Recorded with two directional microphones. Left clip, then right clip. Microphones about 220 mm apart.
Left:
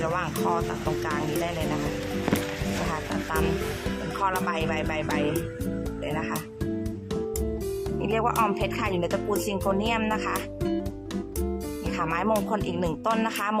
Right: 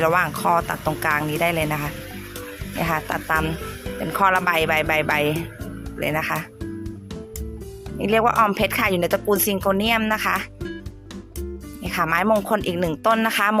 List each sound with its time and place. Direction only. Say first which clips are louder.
0.0 s speech: right 8 dB; 25° right (ahead or behind)
2.9 s speech: right 11 dB; 25° right (ahead or behind)
8.0 s speech: right 8 dB; 20° right (ahead or behind)
11.9 s speech: right 7 dB; 20° right (ahead or behind)